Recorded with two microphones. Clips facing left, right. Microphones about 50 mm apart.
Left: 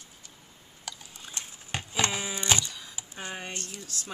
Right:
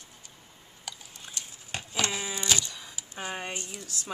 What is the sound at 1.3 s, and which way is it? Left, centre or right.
Horse, left.